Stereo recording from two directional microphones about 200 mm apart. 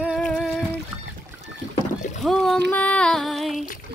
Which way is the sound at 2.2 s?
Centre (ahead or behind).